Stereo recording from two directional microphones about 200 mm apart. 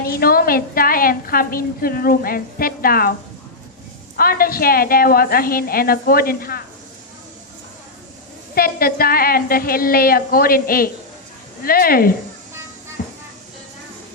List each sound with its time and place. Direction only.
0.0 s a woman's voice: 50° left (ahead or behind)
4.2 s a woman's voice: 50° left (ahead or behind)
8.5 s a woman's voice: 50° left (ahead or behind)
13.0 s music: 45° left (ahead or behind)